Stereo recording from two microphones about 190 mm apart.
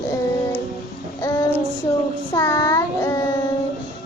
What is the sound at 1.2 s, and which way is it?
Child singing, 15° left (ahead or behind).